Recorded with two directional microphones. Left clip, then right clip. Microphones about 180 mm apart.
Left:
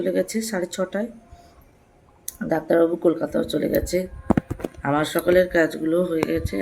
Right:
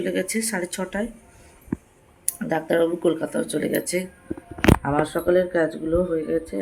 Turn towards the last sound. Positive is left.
turn(degrees=15)  # may be behind; listen again after turning